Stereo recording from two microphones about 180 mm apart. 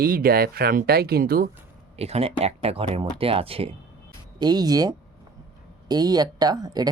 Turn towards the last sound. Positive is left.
turn(degrees=-20)  # may be behind; listen again after turning